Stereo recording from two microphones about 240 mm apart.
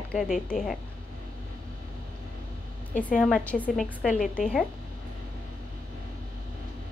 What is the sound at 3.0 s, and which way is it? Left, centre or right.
A woman's voice, centre.